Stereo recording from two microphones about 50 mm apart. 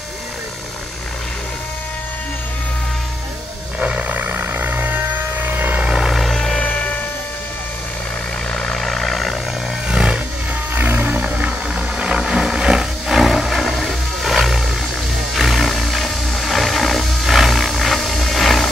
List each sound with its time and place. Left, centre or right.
3.8 s roar: right
4.2 s a sound: right
5.8 s vehicle: centre
6.3 s music: centre
6.6 s music: left
8.5 s vehicle: centre
9.8 s a sound: centre
10.7 s music: right
11.2 s a sound: right; by 14.6 s centre
15.3 s roar: centre